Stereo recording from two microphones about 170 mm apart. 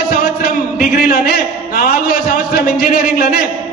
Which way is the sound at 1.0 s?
60° left (ahead or behind).